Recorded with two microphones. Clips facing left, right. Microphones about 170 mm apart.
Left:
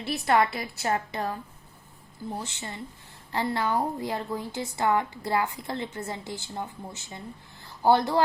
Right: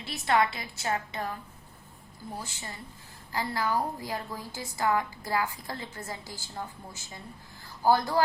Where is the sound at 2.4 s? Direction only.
25° left (ahead or behind).